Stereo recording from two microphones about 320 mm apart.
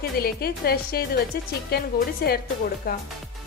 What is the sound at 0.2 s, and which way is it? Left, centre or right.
A woman's voice, left.